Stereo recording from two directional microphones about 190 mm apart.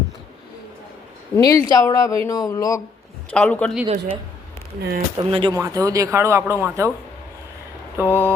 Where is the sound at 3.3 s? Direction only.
5° left (ahead or behind).